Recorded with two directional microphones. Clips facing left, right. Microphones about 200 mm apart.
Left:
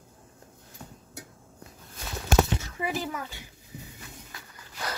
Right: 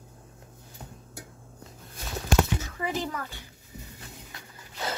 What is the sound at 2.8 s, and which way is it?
Speech, 10° left (ahead or behind).